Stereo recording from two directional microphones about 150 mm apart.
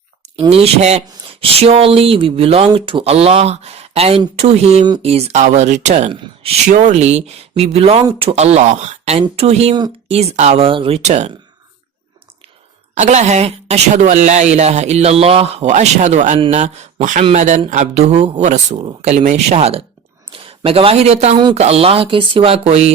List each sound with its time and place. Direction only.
0.5 s speech: 45° right (ahead or behind)
12.9 s a woman's voice: 50° right (ahead or behind)
13.9 s speech: 60° right (ahead or behind); by 19.8 s 45° right (ahead or behind)
20.3 s a sound: 40° right (ahead or behind)
20.7 s speech: 40° right (ahead or behind)